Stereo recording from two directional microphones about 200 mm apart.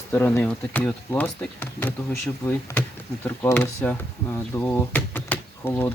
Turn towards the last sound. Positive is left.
turn(degrees=10)  # may be behind; listen again after turning